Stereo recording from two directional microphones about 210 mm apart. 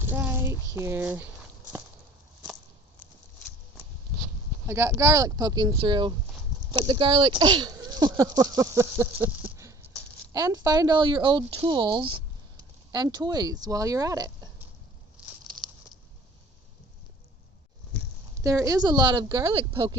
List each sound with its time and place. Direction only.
0.0 s child singing: 10° right (ahead or behind)
0.7 s speech: 10° right (ahead or behind)
4.6 s speech: 10° right (ahead or behind)
18.4 s speech: 15° right (ahead or behind)